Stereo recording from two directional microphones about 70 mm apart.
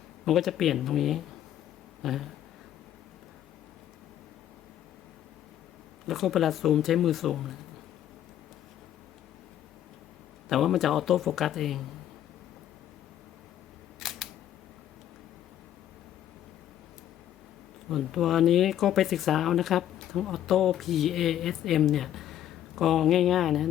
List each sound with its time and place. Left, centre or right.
0.3 s speech: centre
2.0 s a sound: centre
6.1 s speech: centre
10.5 s speech: centre
14.0 s camera: centre
17.8 s speech: centre